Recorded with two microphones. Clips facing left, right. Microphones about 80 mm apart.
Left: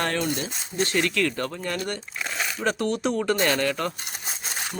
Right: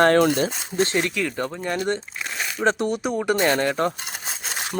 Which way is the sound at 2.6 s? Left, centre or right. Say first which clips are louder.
Right 3 dB; centre.